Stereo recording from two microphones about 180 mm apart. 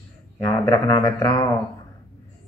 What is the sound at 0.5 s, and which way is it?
Speech, 20° left (ahead or behind).